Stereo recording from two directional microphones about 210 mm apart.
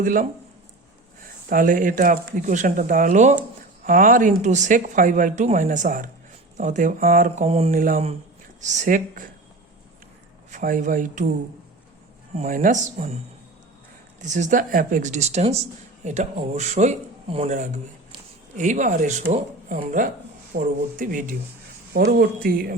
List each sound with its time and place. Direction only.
0.0 s speech: 40° right (ahead or behind)
1.5 s speech: 40° right (ahead or behind)
10.5 s speech: 40° right (ahead or behind)
12.3 s speech: 35° right (ahead or behind)
14.2 s speech: 35° right (ahead or behind)